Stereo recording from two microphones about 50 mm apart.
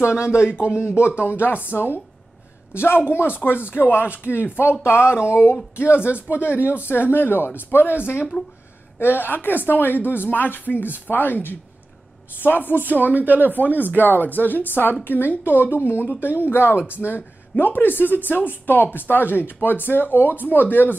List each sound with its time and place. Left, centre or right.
0.2 s speech: left
0.7 s a woman's voice: left
6.3 s speech: left
6.9 s a woman's voice: left
8.3 s speech: left
9.0 s a woman's voice: left
12.7 s speech: right
13.6 s a woman's voice: left